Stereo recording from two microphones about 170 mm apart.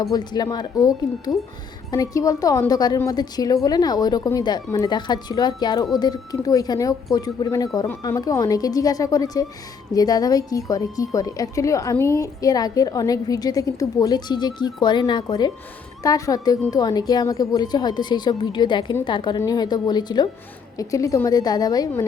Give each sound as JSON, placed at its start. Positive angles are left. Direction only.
{"t": 0.0, "sound": "a woman's voice", "side_deg": 20}